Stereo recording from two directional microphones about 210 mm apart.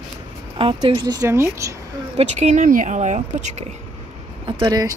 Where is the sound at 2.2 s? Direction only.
35° right (ahead or behind).